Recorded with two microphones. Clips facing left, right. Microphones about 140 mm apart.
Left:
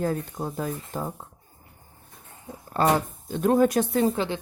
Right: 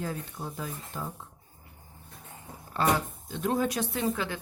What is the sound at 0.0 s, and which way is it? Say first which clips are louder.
Speech: left 8 dB; 45° left (ahead or behind).